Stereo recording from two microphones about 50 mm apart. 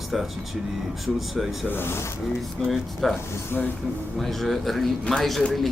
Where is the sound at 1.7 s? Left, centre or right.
Left.